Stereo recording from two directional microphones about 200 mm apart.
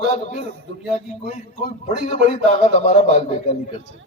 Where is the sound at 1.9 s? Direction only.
35° left (ahead or behind).